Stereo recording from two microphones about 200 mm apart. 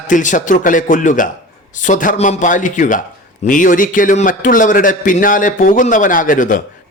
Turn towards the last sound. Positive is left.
turn(degrees=40)  # may be behind; listen again after turning